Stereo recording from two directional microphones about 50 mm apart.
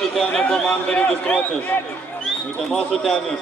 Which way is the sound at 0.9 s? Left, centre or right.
Left.